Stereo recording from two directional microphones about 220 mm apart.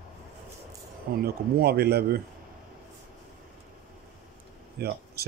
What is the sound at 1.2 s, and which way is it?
Speech, 45° right (ahead or behind).